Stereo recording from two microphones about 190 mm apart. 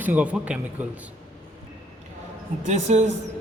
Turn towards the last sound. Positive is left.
turn(degrees=-35)  # may be behind; listen again after turning